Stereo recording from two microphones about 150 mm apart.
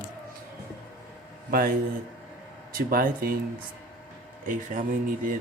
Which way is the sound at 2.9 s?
85° right.